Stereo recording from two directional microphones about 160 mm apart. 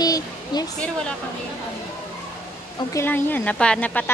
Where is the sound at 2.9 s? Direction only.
15° left (ahead or behind).